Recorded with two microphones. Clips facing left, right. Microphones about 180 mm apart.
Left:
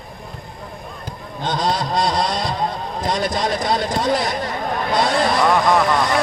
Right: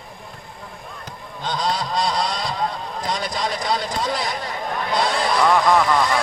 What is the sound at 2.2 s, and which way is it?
Vehicle, 50° left (ahead or behind).